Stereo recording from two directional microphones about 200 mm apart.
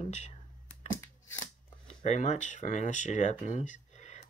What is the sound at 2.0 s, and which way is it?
Speech, 35° left (ahead or behind).